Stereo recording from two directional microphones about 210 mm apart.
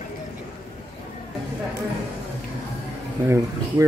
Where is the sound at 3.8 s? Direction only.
15° right (ahead or behind).